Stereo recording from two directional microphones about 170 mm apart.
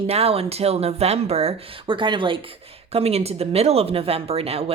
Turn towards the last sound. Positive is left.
turn(degrees=-35)  # may be behind; listen again after turning